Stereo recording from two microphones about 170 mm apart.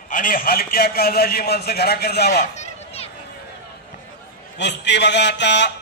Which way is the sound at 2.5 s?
40° left (ahead or behind).